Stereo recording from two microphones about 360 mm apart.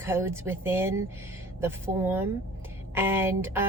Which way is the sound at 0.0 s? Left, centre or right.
Centre.